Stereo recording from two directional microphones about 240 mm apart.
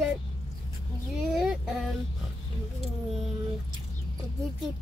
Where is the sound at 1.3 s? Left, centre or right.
Centre.